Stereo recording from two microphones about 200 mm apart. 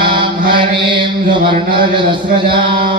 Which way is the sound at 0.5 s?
25° right (ahead or behind).